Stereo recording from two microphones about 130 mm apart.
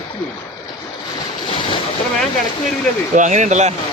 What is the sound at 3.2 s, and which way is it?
Speech, 70° right (ahead or behind).